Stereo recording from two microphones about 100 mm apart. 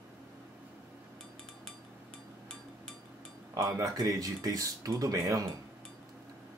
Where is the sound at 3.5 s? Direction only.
40° right (ahead or behind).